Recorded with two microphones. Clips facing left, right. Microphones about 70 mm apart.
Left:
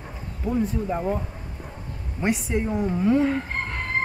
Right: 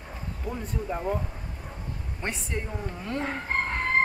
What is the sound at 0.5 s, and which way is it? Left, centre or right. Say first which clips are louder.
Speech: left 8 dB; centre.